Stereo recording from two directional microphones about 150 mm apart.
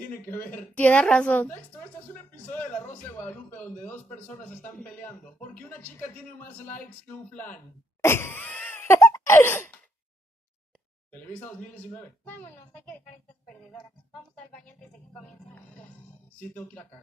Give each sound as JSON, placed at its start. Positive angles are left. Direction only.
{"t": 0.3, "sound": "a man's voice", "side_deg": 15}
{"t": 8.0, "sound": "a sound", "side_deg": 15}
{"t": 11.1, "sound": "a man's voice", "side_deg": 10}
{"t": 14.3, "sound": "a man's voice", "side_deg": 5}
{"t": 16.3, "sound": "a man's voice", "side_deg": 10}